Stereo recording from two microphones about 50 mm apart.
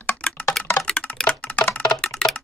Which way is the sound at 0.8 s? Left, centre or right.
Centre.